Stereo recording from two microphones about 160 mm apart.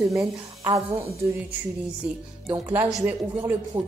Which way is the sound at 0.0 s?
20° right (ahead or behind).